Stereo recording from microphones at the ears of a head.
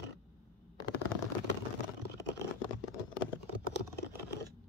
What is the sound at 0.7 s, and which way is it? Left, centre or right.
Shuffling cards, left.